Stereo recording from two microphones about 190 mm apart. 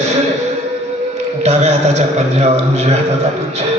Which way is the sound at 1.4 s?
35° right (ahead or behind).